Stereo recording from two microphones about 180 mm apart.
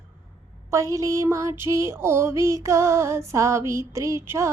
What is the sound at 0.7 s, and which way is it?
Female singing, 15° right (ahead or behind).